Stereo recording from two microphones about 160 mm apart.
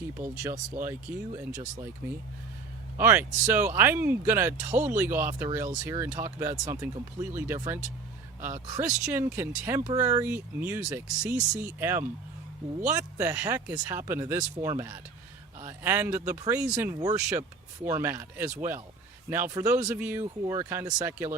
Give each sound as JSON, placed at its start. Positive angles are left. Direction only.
{"t": 0.1, "sound": "speech", "side_deg": -15}
{"t": 1.3, "sound": "speech", "side_deg": -25}
{"t": 2.0, "sound": "a man's voice", "side_deg": -15}